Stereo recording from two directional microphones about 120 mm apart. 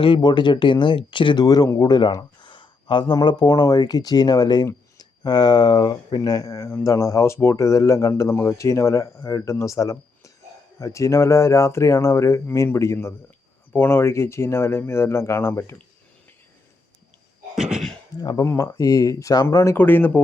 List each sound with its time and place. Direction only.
0.0 s speech: 40° left (ahead or behind); by 15.7 s 20° left (ahead or behind)
17.5 s cough: 5° right (ahead or behind)
18.2 s speech: 35° left (ahead or behind); by 20.2 s 15° left (ahead or behind)